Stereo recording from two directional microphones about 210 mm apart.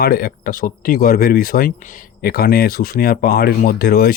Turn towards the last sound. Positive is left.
turn(degrees=45)  # may be behind; listen again after turning